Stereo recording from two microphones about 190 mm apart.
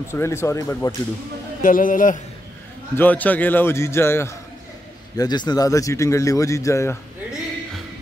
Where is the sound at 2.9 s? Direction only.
10° left (ahead or behind).